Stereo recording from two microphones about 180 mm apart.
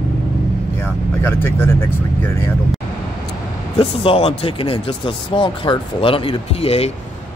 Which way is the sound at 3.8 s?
30° left (ahead or behind).